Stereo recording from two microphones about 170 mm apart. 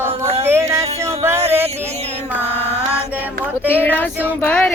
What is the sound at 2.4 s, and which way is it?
Mantra, 40° right (ahead or behind).